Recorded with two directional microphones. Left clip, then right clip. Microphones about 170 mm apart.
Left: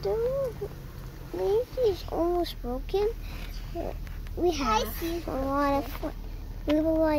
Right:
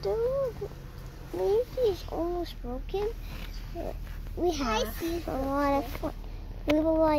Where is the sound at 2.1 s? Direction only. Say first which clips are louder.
Left 5 dB; 65° left (ahead or behind).